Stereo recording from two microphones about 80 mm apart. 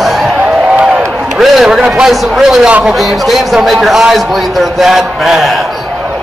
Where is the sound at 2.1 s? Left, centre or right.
Centre.